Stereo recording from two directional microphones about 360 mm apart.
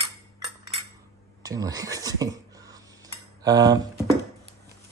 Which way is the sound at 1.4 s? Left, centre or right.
Centre.